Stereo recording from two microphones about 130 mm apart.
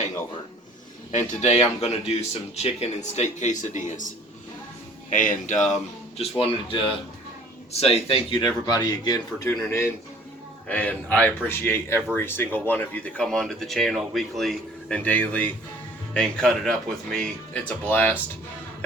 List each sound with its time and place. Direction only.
1.1 s speech: 65° left (ahead or behind)
5.1 s speech: 85° left
6.1 s a man's voice: 45° left (ahead or behind); by 18.2 s 15° left (ahead or behind)